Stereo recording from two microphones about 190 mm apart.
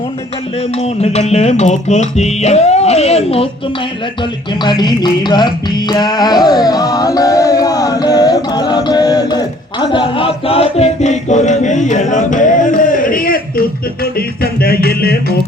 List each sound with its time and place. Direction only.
0.8 s music: 35° left (ahead or behind)
4.6 s music: 25° left (ahead or behind); by 15.4 s 55° left (ahead or behind)